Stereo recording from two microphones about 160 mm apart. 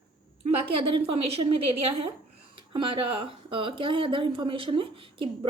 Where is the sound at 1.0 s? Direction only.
35° right (ahead or behind).